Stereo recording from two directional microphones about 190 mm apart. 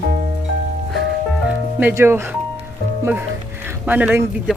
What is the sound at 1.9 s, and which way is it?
Speech, 15° right (ahead or behind).